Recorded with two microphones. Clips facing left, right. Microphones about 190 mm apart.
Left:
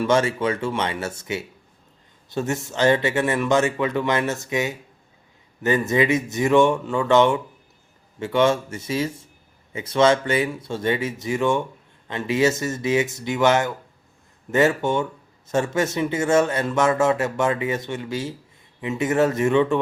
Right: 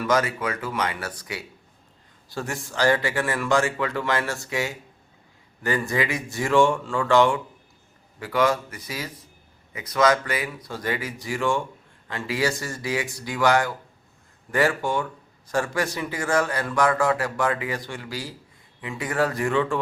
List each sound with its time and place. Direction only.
0.0 s speech: 25° left (ahead or behind)